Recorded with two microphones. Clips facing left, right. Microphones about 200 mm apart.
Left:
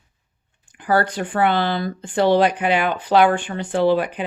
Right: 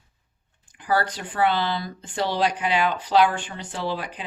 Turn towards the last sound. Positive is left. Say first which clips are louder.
# left 11 dB
turn(degrees=60)  # may be behind; listen again after turning